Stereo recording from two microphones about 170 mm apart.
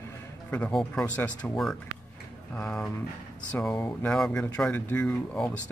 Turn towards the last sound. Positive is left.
turn(degrees=5)  # may be behind; listen again after turning